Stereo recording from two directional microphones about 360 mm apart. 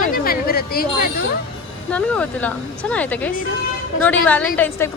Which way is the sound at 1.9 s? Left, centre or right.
Centre.